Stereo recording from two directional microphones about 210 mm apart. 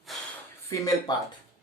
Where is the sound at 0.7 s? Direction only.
15° left (ahead or behind).